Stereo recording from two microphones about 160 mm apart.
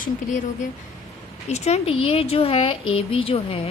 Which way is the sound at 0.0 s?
55° left (ahead or behind).